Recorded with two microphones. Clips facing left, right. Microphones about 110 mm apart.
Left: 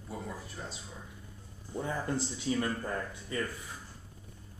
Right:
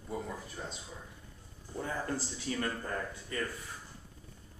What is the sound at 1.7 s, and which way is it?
Speech, 15° left (ahead or behind).